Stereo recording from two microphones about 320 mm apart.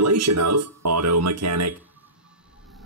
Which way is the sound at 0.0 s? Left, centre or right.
Right.